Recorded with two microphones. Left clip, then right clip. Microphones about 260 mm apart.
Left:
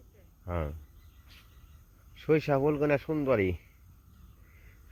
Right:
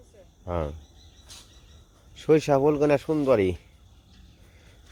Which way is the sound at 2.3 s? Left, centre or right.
Centre.